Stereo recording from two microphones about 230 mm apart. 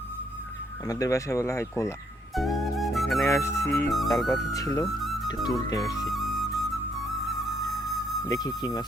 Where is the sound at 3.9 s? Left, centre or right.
Centre.